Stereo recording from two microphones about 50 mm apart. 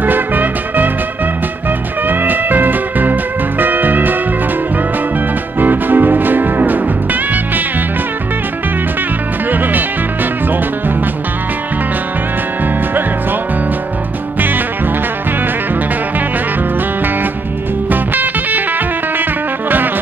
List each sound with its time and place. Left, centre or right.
0.0 s music: right
2.0 s music: right
5.6 s music: right
9.5 s music: right
17.8 s music: right